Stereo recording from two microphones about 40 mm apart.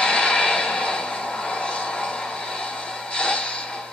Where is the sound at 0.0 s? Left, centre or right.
Left.